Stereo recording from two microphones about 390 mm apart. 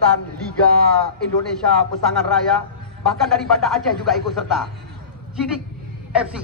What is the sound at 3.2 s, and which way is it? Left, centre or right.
A man's voice, centre.